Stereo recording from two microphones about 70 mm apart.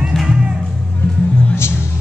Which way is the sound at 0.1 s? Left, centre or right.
Centre.